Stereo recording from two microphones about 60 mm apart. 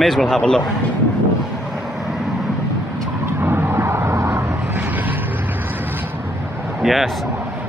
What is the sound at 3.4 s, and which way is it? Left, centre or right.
Vehicle, right.